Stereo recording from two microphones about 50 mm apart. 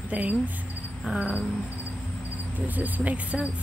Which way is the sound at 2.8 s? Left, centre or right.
Right.